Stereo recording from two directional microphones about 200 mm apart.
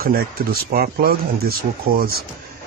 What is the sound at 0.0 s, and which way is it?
Speech, 45° right (ahead or behind).